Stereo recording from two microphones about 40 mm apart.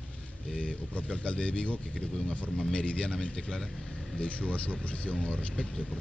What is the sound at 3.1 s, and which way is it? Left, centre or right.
Speech, centre.